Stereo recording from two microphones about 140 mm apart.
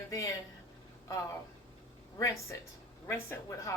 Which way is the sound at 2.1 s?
20° left (ahead or behind).